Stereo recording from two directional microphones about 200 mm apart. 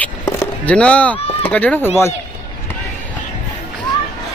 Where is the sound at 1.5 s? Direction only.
5° left (ahead or behind).